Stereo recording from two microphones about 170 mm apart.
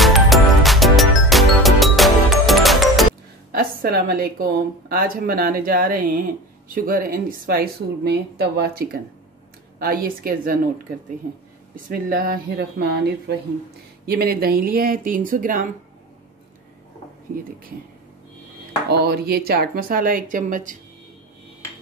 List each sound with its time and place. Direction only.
0.0 s music: centre (ahead or behind)
3.5 s a woman's voice: 60° right (ahead or behind)
11.7 s a woman's voice: 55° right (ahead or behind); by 13.4 s 75° right (ahead or behind)
14.0 s a woman's voice: 65° right (ahead or behind)
18.9 s a woman's voice: 70° right (ahead or behind); by 20.7 s 50° right (ahead or behind)